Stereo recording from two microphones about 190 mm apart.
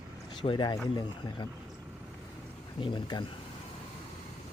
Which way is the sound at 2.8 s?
25° left (ahead or behind).